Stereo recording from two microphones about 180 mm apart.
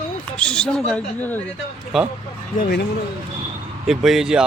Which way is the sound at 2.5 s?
55° left (ahead or behind).